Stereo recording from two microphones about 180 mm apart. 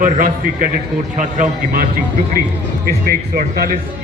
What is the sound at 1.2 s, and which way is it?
A man's voice, 50° right (ahead or behind).